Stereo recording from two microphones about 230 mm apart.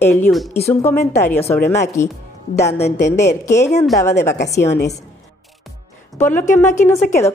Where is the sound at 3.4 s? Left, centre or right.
Centre.